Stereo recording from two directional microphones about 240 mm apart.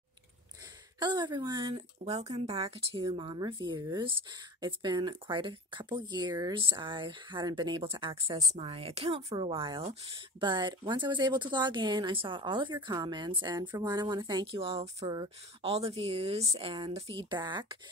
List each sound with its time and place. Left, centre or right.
0.9 s speech: centre